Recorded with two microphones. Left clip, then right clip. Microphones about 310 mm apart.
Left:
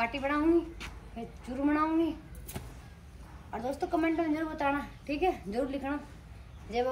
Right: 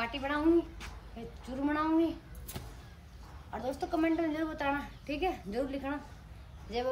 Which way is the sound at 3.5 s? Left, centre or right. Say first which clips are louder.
Left 2 dB; centre.